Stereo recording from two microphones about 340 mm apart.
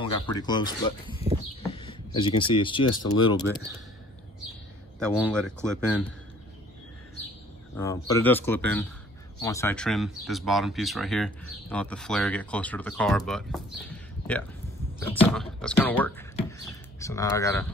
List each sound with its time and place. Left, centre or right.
0.0 s speech: centre
1.3 s a sound: right
1.7 s speech: centre
2.9 s speech: left
3.3 s speech: centre
4.9 s speech: centre
7.7 s speech: centre